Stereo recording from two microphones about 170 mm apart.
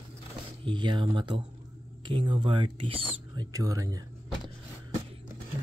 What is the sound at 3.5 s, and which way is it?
Speech, 20° right (ahead or behind).